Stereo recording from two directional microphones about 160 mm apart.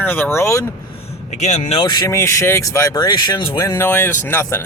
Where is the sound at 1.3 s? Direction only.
45° left (ahead or behind).